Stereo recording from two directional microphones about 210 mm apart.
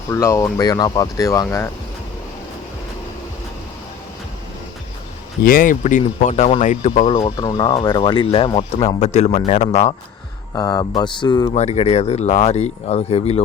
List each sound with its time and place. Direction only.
0.1 s speech: 15° left (ahead or behind)
5.4 s speech: 45° left (ahead or behind)
7.1 s speech: 20° left (ahead or behind)
10.5 s speech: 15° left (ahead or behind)